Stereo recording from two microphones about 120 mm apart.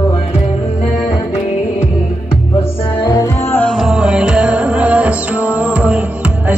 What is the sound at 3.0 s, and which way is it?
Music, 35° left (ahead or behind).